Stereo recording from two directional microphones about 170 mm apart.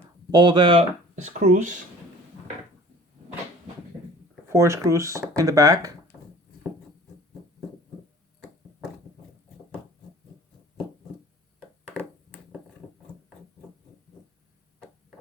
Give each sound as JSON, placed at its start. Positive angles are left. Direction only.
{"t": 0.3, "sound": "speech", "side_deg": -25}
{"t": 4.4, "sound": "speech", "side_deg": -15}